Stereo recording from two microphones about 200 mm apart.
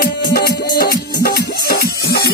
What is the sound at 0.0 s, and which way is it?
Music, 50° left (ahead or behind).